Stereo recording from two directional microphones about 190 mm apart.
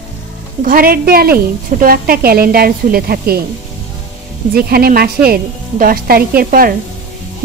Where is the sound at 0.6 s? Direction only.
50° right (ahead or behind).